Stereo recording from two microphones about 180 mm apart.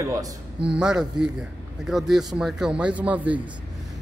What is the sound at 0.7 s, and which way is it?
A man's voice, 5° right (ahead or behind).